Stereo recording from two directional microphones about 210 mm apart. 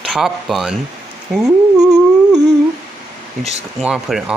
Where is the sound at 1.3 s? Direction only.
5° right (ahead or behind).